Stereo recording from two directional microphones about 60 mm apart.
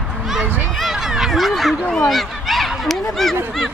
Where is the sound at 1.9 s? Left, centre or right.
Centre.